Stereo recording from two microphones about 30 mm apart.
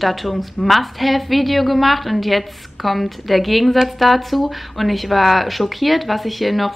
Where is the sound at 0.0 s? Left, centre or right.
Centre.